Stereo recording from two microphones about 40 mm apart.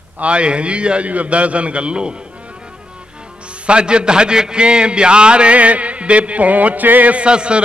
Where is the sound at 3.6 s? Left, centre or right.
Right.